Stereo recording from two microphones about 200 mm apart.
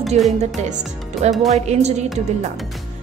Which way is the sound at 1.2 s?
35° right (ahead or behind).